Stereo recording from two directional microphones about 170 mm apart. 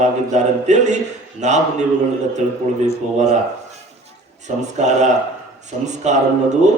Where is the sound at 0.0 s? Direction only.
45° right (ahead or behind).